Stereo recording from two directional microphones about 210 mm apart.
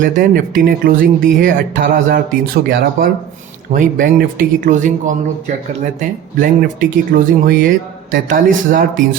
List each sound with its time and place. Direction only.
0.0 s speech: 40° right (ahead or behind)